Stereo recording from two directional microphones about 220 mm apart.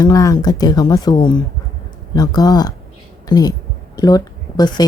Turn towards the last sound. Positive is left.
turn(degrees=20)  # may be behind; listen again after turning